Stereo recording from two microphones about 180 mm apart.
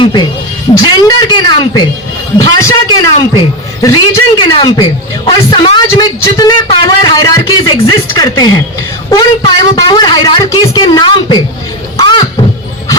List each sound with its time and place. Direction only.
0.0 s a woman's voice: 25° left (ahead or behind)
11.9 s beatboxing: 25° left (ahead or behind)